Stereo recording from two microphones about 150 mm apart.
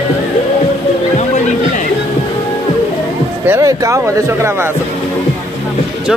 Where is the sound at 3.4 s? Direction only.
20° right (ahead or behind).